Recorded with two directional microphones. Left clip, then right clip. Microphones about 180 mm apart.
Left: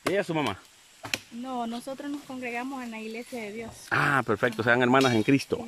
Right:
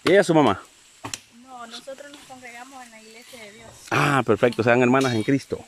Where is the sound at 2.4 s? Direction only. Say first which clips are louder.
Left 7 dB; 65° left (ahead or behind).